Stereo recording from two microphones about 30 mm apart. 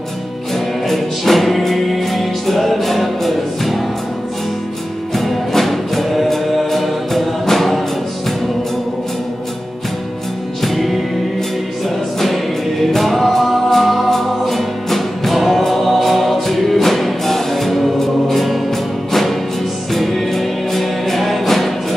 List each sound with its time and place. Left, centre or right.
0.8 s music: centre
5.1 s music: centre
10.6 s music: centre
12.9 s music: centre